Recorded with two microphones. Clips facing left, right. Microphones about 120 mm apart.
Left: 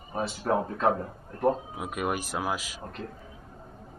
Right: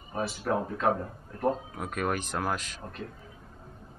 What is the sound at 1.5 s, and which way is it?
Speech, 5° left (ahead or behind).